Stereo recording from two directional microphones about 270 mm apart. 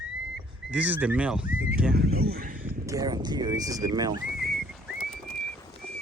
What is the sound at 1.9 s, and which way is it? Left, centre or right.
Speech, right.